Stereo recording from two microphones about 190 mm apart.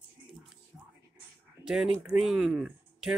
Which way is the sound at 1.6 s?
20° left (ahead or behind).